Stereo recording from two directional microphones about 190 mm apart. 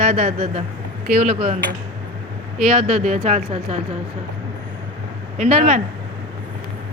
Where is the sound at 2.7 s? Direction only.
40° right (ahead or behind).